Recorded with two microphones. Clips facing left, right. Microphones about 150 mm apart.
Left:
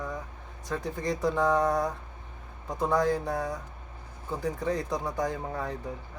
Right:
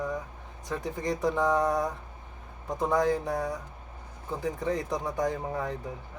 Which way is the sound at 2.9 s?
20° right (ahead or behind).